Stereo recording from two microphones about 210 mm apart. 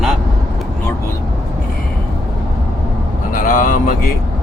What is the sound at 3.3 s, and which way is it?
Speech, 40° left (ahead or behind).